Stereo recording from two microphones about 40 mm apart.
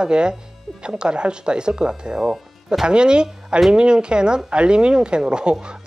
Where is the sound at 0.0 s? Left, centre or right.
Right.